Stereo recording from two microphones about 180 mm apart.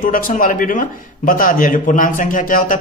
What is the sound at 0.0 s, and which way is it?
A man's voice, 50° left (ahead or behind).